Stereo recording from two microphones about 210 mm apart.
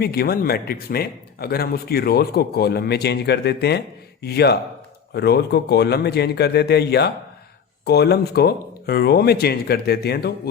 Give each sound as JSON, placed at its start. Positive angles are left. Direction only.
{"t": 0.0, "sound": "speech", "side_deg": 50}